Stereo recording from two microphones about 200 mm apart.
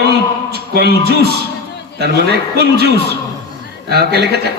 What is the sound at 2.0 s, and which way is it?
A man's voice, 55° right (ahead or behind).